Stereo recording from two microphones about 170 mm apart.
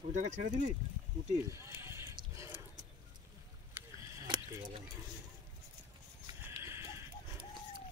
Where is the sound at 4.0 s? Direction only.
15° right (ahead or behind).